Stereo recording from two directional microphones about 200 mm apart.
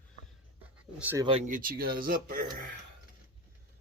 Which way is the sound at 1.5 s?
45° right (ahead or behind).